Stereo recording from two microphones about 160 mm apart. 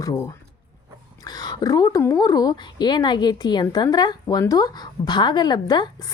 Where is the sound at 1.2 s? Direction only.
25° left (ahead or behind).